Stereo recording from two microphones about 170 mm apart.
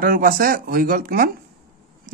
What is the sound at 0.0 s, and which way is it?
Speech, 55° right (ahead or behind).